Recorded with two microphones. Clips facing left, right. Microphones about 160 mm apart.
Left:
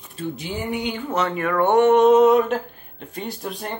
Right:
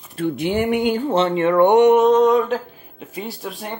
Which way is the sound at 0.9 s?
35° right (ahead or behind).